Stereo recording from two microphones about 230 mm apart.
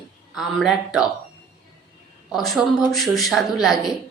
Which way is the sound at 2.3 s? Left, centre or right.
Centre.